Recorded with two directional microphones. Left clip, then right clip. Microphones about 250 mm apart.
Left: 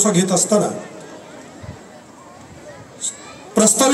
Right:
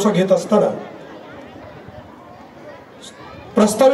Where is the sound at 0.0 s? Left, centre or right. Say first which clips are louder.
Right 2 dB; left.